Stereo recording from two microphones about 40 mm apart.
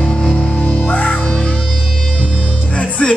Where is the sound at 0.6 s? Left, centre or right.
Left.